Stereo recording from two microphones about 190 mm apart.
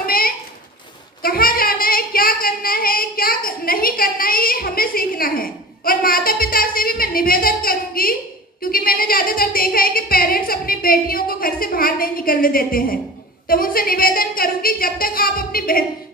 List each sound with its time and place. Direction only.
0.0 s a sound: 50° left (ahead or behind)
1.2 s child singing: 50° left (ahead or behind)
13.5 s a woman's voice: 50° left (ahead or behind)